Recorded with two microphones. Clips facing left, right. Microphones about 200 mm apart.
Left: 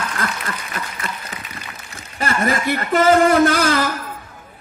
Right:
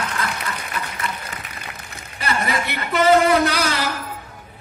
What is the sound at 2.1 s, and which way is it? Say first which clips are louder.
A woman's voice: left 3 dB; 45° left (ahead or behind).